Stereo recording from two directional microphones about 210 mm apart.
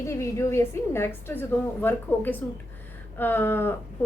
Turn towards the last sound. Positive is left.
turn(degrees=10)  # may be behind; listen again after turning